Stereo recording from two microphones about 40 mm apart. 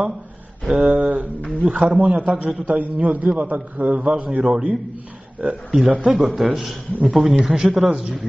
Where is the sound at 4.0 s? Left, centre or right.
Right.